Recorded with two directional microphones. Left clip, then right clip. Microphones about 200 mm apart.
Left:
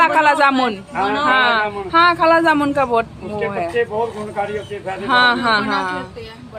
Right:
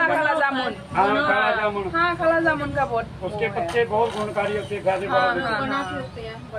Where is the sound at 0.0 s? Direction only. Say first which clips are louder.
Left 7 dB; 50° left (ahead or behind).